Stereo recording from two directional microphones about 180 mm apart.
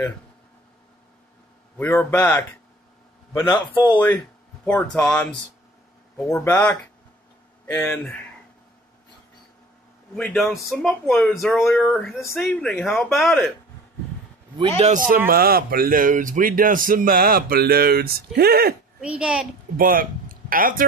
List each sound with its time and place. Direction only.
1.8 s a man's voice: 10° left (ahead or behind)
3.4 s a man's voice: 25° left (ahead or behind)
4.6 s a man's voice: 10° left (ahead or behind)
10.1 s a man's voice: centre (ahead or behind)
14.8 s speech: 45° right (ahead or behind)
15.2 s speech: 55° right (ahead or behind)
18.9 s a man's voice: 5° right (ahead or behind)
19.8 s speech: 50° right (ahead or behind)